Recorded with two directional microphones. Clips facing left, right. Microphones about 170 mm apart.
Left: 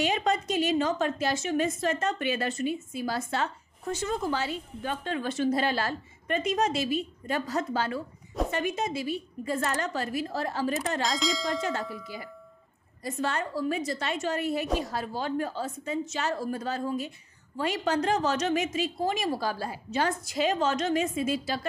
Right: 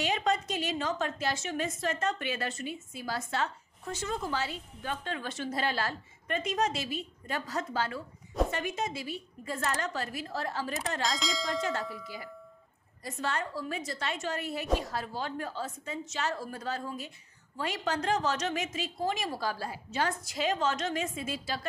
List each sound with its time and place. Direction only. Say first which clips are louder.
0.0 s a woman's voice: left 3 dB; 15° left (ahead or behind)
11.0 s bell: left 4 dB; centre (ahead or behind)
13.0 s a woman's voice: left 4 dB; 15° left (ahead or behind)